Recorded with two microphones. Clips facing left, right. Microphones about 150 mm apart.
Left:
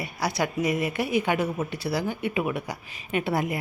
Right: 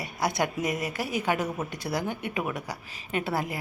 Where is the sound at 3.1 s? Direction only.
35° right (ahead or behind).